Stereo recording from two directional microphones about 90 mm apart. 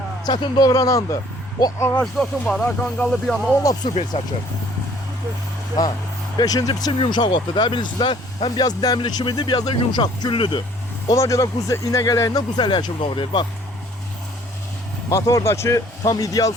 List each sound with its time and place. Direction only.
0.3 s speech: 45° left (ahead or behind)
1.8 s speech: 25° left (ahead or behind)
2.1 s speech: 5° left (ahead or behind)
3.6 s speech: 40° left (ahead or behind)
6.3 s speech: 45° left (ahead or behind)
7.0 s speech: 65° left (ahead or behind); by 9.0 s 45° left (ahead or behind)
9.0 s speech: 60° left (ahead or behind)
11.1 s speech: 40° left (ahead or behind); by 13.5 s 60° left (ahead or behind)
15.1 s speech: 35° left (ahead or behind)